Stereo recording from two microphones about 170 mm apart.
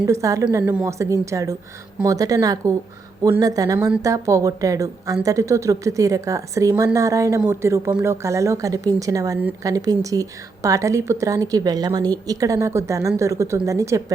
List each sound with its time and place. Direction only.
0.0 s a woman's voice: 15° right (ahead or behind)
3.8 s a woman's voice: 5° right (ahead or behind)
4.0 s a woman's voice: 20° right (ahead or behind)